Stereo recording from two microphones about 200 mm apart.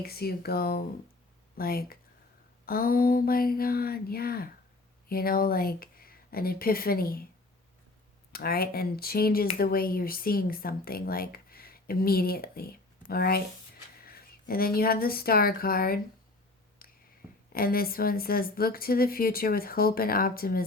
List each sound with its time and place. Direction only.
0.0 s speech: 50° left (ahead or behind)
8.3 s speech: 50° left (ahead or behind)
17.5 s speech: 45° left (ahead or behind)